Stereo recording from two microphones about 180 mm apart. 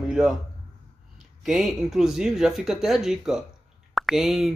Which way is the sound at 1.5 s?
Centre (ahead or behind).